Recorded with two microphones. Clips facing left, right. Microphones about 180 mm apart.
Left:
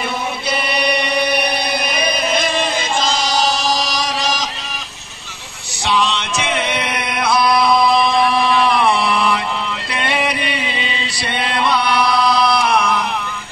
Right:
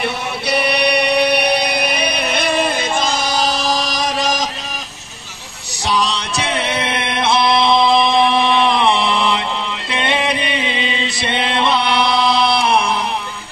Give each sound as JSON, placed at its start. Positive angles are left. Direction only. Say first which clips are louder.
{"t": 0.0, "sound": "chant", "louder": "right 1 dB", "side_deg": -65}
{"t": 5.9, "sound": "chant", "louder": "left 1 dB", "side_deg": -40}
{"t": 9.9, "sound": "mantra", "louder": "right 2 dB", "side_deg": -20}